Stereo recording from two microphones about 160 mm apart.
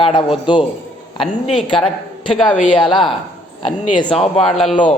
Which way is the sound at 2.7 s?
30° left (ahead or behind).